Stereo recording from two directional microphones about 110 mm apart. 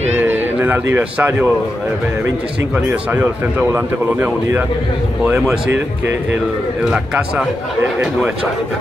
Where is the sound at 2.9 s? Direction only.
15° right (ahead or behind).